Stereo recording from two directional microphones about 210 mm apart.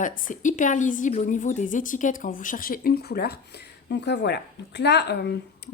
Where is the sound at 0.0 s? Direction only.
40° left (ahead or behind).